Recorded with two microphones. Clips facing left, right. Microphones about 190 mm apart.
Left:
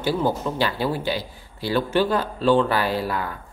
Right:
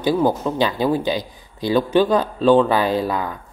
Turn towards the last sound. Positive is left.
turn(degrees=-20)  # may be behind; listen again after turning